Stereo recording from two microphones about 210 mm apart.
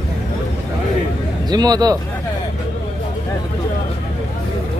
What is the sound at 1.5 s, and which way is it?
Speech, 20° right (ahead or behind).